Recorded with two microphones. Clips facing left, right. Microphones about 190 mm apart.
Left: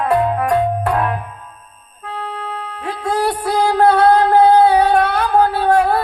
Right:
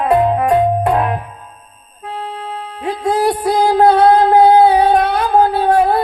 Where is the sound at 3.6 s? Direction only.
20° right (ahead or behind).